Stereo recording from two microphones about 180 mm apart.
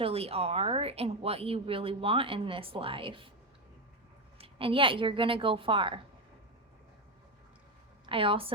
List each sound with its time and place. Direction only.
0.0 s speech: 35° right (ahead or behind)
4.4 s a woman's voice: 30° right (ahead or behind)
8.0 s a woman's voice: 30° right (ahead or behind)